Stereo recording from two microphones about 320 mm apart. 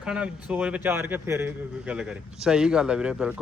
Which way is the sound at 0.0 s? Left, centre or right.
Centre.